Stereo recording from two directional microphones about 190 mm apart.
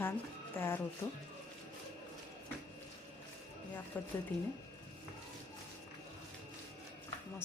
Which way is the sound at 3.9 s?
10° left (ahead or behind).